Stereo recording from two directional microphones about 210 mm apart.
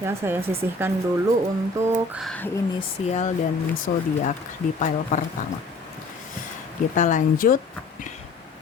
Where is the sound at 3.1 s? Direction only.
30° left (ahead or behind).